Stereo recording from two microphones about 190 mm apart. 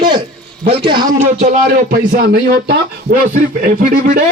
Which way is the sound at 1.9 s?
50° right (ahead or behind).